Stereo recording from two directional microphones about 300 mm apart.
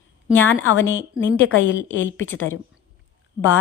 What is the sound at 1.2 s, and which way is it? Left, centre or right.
A woman's voice, left.